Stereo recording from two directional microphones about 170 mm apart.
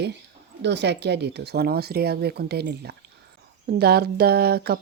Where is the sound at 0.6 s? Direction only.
90° right; by 4.8 s 70° right (ahead or behind).